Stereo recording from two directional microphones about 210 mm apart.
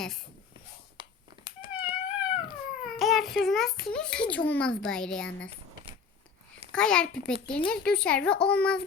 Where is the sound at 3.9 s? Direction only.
5° left (ahead or behind).